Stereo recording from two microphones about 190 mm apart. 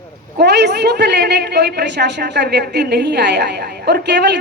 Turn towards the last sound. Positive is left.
turn(degrees=-60)  # may be behind; listen again after turning